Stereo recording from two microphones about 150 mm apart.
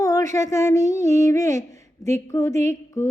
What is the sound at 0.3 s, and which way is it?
Mantra, 20° left (ahead or behind).